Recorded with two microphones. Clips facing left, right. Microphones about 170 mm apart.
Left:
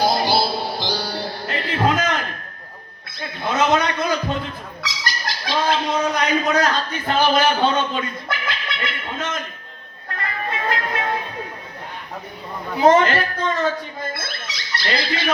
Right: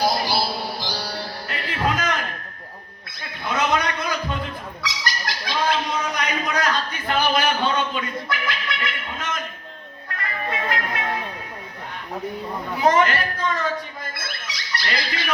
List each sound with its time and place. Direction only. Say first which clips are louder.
0.0 s music: left 3 dB; 25° left (ahead or behind)
3.2 s a sound: left 4 dB; 25° left (ahead or behind)
10.2 s music: left 1 dB; 30° left (ahead or behind)
12.8 s squeak: left 4 dB; 25° left (ahead or behind)